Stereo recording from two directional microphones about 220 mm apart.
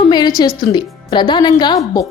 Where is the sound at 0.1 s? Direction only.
20° left (ahead or behind).